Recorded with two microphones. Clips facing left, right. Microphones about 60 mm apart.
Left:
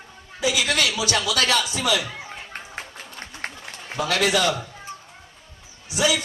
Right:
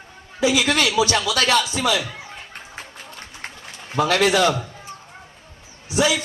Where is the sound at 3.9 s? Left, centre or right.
Right.